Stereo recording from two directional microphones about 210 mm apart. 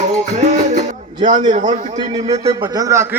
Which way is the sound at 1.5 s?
35° right (ahead or behind).